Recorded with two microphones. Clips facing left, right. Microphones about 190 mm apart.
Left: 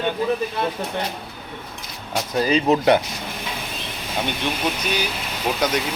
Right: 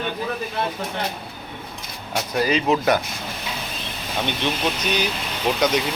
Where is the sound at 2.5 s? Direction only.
30° left (ahead or behind).